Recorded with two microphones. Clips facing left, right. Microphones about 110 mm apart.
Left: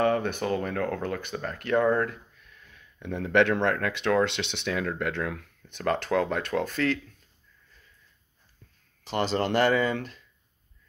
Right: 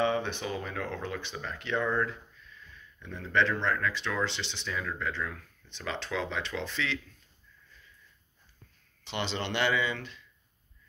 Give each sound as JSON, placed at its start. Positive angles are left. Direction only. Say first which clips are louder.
{"t": 0.0, "sound": "speech", "louder": "left 4 dB", "side_deg": 50}
{"t": 9.0, "sound": "speech", "louder": "left 7 dB", "side_deg": 40}